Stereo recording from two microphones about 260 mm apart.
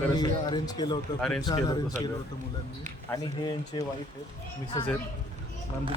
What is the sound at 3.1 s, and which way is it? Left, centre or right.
Speech, centre.